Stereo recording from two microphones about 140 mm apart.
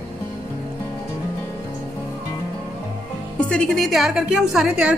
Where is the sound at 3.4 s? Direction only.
5° left (ahead or behind).